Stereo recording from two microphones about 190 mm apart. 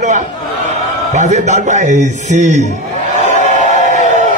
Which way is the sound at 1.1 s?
40° right (ahead or behind).